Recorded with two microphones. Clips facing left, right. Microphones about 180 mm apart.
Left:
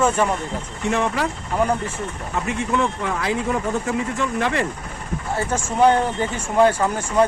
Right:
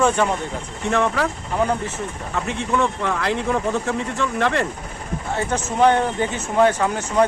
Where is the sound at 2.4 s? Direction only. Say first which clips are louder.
Even; 5° left (ahead or behind).